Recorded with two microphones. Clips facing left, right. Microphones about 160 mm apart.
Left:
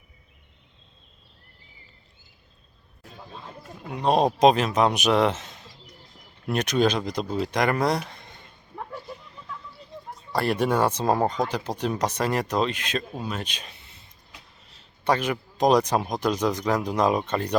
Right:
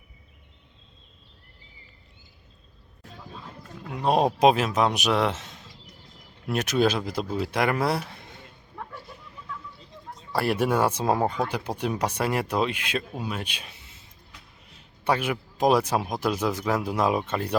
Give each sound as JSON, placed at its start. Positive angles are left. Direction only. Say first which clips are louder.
{"t": 3.9, "sound": "a man's voice", "louder": "left 1 dB", "side_deg": -5}
{"t": 8.7, "sound": "a sound", "louder": "left 3 dB", "side_deg": 20}
{"t": 10.3, "sound": "a man's voice", "louder": "left 1 dB", "side_deg": -10}